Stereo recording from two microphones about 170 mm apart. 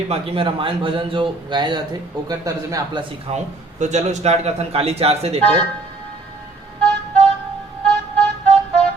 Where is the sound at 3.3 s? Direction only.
45° right (ahead or behind).